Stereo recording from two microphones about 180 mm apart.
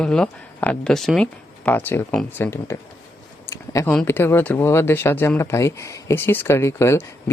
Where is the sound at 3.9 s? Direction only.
10° left (ahead or behind).